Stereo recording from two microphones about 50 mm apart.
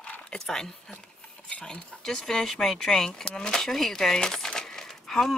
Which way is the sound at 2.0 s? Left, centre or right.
Centre.